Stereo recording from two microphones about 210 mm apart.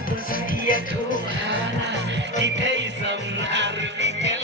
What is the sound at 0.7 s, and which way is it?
Music, 40° left (ahead or behind).